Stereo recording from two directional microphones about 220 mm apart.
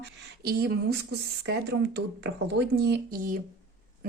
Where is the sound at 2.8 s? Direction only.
45° right (ahead or behind).